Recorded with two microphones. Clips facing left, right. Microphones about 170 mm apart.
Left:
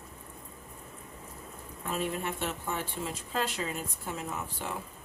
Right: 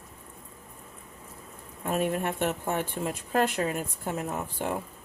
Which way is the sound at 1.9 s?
50° right (ahead or behind).